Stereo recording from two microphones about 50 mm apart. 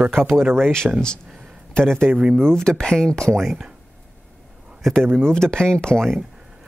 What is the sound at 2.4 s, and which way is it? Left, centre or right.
Speech, centre.